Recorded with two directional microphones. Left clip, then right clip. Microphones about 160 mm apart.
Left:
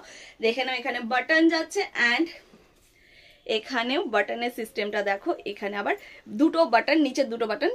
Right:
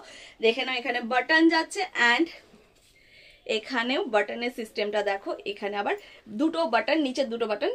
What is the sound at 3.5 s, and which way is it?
A woman's voice, 25° left (ahead or behind).